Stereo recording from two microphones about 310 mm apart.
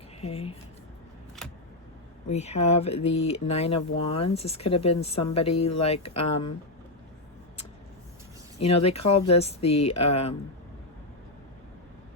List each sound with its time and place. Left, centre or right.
0.2 s a sound: centre
1.4 s vehicle: centre
2.2 s speech: left
8.5 s speech: centre